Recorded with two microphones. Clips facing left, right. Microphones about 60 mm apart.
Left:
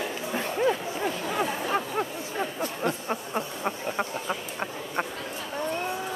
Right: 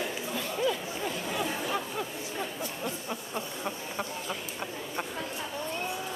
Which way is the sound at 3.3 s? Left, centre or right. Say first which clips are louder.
Left 5 dB; left.